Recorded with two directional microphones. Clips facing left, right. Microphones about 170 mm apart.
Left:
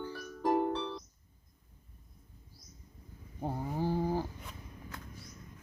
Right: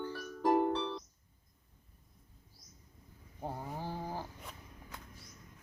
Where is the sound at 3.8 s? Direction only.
15° left (ahead or behind).